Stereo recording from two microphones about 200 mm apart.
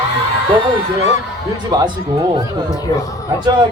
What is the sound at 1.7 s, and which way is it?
Speech, 20° right (ahead or behind).